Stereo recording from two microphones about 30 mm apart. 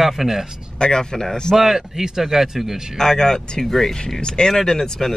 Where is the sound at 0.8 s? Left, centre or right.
Left.